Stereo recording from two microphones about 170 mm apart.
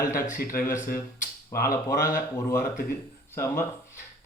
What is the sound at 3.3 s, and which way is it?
Speech, 15° left (ahead or behind).